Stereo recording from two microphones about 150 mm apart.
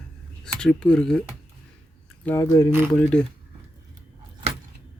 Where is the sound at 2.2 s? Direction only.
15° left (ahead or behind).